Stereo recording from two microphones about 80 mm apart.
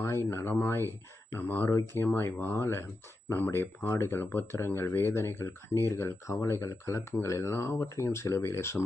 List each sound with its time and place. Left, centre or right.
0.0 s speech: left